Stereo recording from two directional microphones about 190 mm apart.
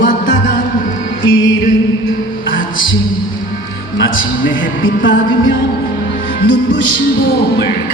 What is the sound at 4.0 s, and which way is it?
A man's voice, 85° left.